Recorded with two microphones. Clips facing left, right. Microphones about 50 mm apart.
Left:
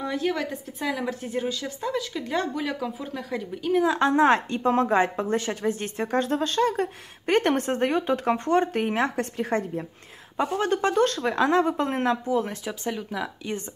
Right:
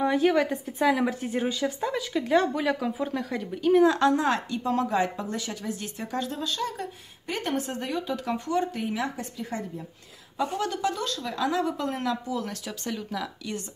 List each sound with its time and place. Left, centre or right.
0.0 s a woman's voice: centre
4.0 s speech: left
10.3 s speech: left